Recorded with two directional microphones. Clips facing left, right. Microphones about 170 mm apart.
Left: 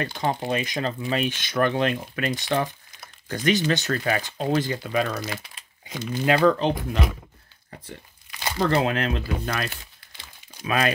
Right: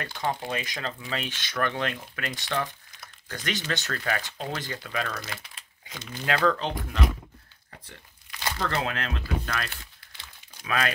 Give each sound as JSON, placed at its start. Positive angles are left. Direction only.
{"t": 0.0, "sound": "speech", "side_deg": 20}
{"t": 5.2, "sound": "crumpling", "side_deg": 5}
{"t": 6.1, "sound": "speech", "side_deg": 20}
{"t": 8.6, "sound": "speech", "side_deg": 20}